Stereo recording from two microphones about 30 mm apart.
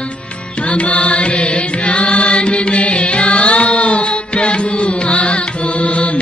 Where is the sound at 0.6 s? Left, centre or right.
Left.